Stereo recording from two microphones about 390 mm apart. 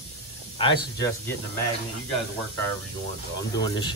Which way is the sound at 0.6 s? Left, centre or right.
Centre.